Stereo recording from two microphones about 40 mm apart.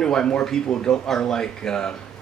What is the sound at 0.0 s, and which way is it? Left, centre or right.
Speech, left.